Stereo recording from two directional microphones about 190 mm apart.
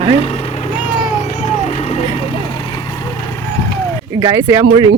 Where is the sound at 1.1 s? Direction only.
35° left (ahead or behind).